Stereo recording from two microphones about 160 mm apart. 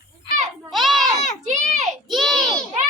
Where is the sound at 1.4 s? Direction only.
45° right (ahead or behind).